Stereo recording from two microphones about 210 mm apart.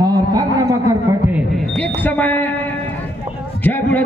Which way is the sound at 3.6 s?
10° left (ahead or behind).